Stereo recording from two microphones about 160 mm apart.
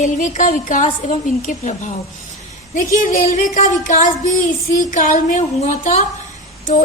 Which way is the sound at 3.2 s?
50° left (ahead or behind).